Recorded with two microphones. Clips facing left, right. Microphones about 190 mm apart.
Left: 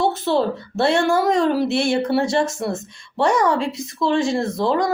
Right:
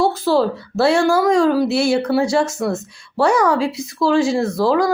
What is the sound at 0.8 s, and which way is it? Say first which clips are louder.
Speech: right 3 dB; centre (ahead or behind).